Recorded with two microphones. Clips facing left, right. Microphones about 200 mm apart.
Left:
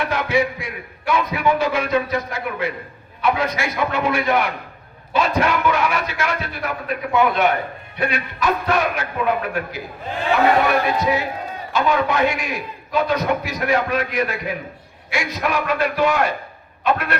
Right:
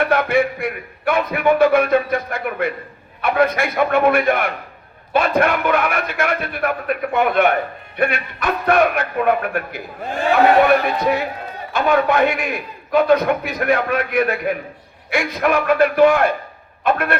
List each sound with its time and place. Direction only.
0.0 s a man's voice: 55° right (ahead or behind)